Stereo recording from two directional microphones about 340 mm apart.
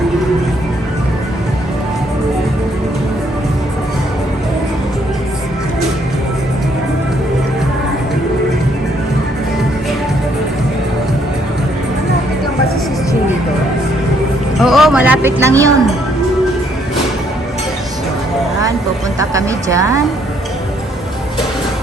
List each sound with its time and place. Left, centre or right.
14.6 s music: centre
19.2 s speech: centre